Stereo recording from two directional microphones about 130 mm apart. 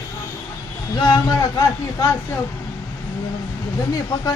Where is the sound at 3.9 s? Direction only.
30° left (ahead or behind).